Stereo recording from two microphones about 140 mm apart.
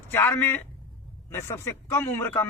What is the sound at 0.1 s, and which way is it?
A man's voice, 15° left (ahead or behind).